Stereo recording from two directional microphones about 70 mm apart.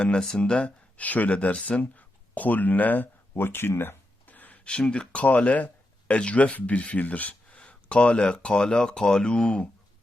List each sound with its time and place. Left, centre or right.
0.0 s speech: centre
1.8 s a sound: left
4.7 s speech: centre